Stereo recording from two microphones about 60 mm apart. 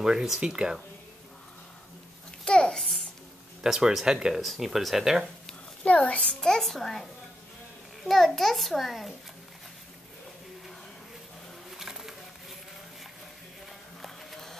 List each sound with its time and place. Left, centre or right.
0.0 s speech: centre
2.4 s a sound: centre
3.6 s a child's voice: centre
5.9 s a child's voice: left
6.4 s a child's voice: centre
11.7 s a sound: centre
14.0 s music: centre